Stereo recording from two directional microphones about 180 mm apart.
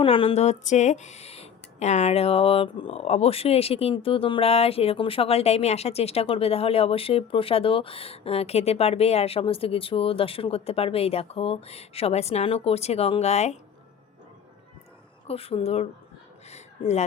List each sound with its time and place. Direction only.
0.0 s speech: 30° left (ahead or behind)
15.3 s speech: 35° left (ahead or behind)
16.5 s a sound: 40° left (ahead or behind)